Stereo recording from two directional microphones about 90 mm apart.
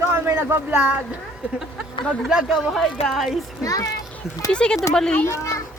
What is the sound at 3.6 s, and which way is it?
Speech, 40° left (ahead or behind).